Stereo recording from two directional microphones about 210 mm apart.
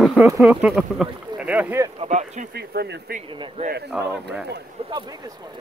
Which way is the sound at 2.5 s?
50° right (ahead or behind).